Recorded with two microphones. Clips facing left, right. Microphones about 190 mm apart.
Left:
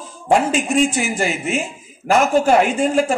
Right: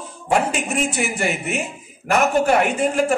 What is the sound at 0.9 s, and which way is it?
A man's voice, 65° right (ahead or behind).